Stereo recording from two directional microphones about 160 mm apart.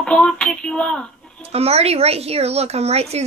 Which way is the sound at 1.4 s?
40° right (ahead or behind).